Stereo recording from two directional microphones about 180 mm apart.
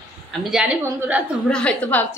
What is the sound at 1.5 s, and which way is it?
Speech, 5° left (ahead or behind).